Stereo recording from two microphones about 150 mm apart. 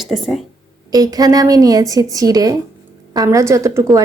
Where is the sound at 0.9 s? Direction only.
25° right (ahead or behind).